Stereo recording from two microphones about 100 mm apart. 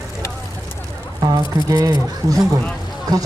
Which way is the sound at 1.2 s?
35° right (ahead or behind).